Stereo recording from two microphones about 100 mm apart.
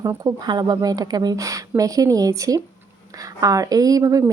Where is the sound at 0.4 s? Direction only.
45° right (ahead or behind).